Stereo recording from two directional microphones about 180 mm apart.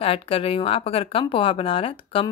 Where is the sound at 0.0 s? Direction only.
30° left (ahead or behind).